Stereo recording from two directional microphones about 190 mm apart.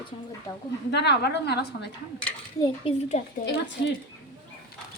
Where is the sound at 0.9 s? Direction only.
60° left (ahead or behind).